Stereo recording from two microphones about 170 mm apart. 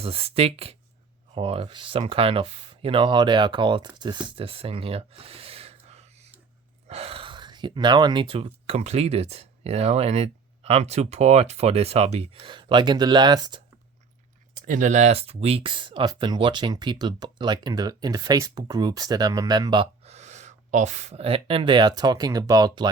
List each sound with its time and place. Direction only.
0.0 s speech: 35° right (ahead or behind)
14.5 s speech: 50° right (ahead or behind); by 22.9 s 25° right (ahead or behind)